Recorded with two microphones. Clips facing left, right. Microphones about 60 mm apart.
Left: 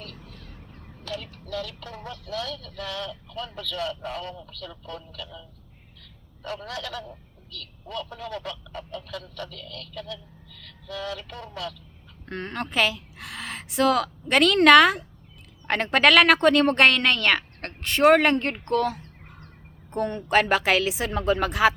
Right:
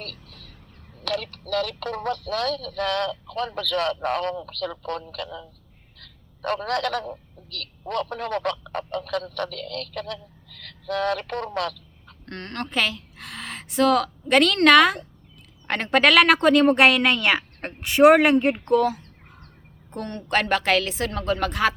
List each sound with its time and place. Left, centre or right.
0.0 s a sound: right
1.0 s speech: right
12.2 s a woman's voice: centre